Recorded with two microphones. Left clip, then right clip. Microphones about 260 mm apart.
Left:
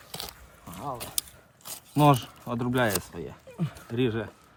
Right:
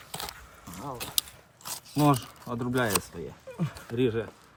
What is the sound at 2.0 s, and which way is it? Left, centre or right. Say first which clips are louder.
Speech: left 3 dB; left.